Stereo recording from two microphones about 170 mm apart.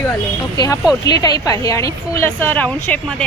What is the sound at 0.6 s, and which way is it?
A woman's voice, 20° left (ahead or behind).